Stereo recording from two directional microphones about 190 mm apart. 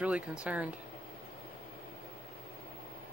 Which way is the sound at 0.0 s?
5° right (ahead or behind).